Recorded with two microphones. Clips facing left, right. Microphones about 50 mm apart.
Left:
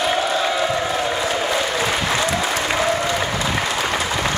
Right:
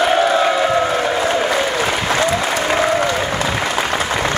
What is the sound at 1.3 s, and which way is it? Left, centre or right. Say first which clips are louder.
Applause: right 4 dB; right.